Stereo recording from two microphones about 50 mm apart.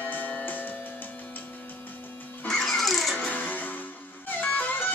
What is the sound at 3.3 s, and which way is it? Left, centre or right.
Music, left.